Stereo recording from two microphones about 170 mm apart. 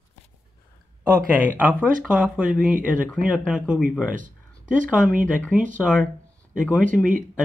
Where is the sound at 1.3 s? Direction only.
10° right (ahead or behind).